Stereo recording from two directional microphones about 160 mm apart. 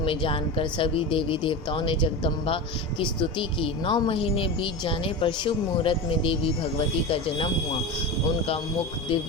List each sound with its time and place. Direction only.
0.0 s speech: 35° left (ahead or behind)